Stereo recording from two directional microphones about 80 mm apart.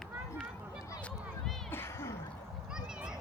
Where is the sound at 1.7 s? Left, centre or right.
Left.